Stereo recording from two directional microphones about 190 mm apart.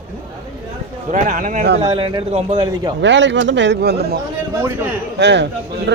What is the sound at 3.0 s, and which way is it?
Speech, 70° right (ahead or behind).